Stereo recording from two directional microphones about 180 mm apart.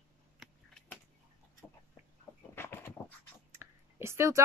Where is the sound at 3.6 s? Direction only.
15° right (ahead or behind).